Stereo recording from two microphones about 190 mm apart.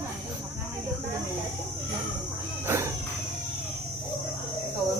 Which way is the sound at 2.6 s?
15° right (ahead or behind).